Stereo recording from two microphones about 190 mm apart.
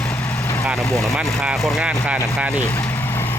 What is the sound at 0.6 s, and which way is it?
Speech, 5° right (ahead or behind).